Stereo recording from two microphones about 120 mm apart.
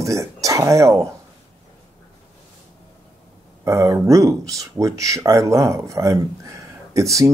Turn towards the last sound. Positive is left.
turn(degrees=-25)  # may be behind; listen again after turning